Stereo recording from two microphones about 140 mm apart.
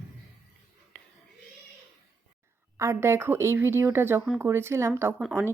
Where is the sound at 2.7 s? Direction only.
20° right (ahead or behind).